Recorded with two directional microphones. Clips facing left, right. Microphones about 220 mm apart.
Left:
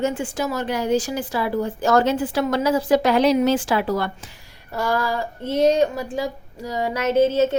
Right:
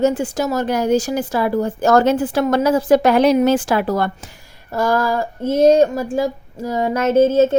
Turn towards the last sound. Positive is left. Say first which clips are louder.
# right 4 dB
turn(degrees=-50)  # may be behind; listen again after turning